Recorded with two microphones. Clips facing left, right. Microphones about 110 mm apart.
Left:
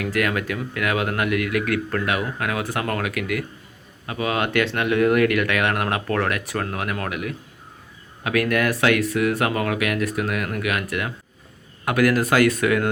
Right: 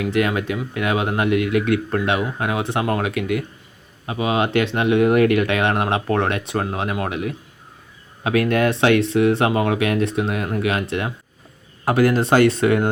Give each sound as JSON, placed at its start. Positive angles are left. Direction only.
{"t": 0.0, "sound": "speech", "side_deg": -25}